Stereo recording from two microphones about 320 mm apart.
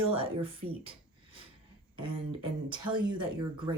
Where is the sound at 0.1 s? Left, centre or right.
Centre.